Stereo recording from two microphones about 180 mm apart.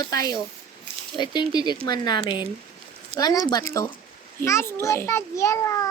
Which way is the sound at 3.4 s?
20° left (ahead or behind).